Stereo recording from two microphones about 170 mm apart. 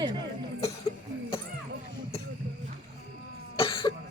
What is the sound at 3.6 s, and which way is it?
Cough, 30° left (ahead or behind).